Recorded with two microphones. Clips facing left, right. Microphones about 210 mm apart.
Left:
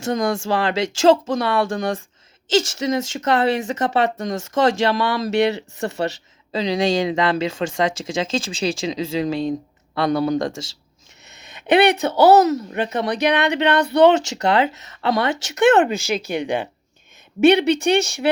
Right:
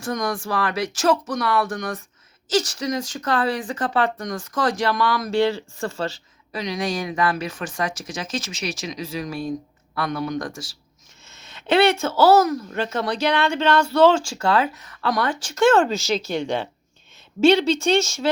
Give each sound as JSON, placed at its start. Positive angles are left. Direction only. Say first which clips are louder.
{"t": 0.0, "sound": "a woman's voice", "louder": "left 4 dB", "side_deg": 25}
{"t": 17.7, "sound": "a woman's voice", "louder": "left 2 dB", "side_deg": 15}
{"t": 18.0, "sound": "speech", "louder": "left 2 dB", "side_deg": 60}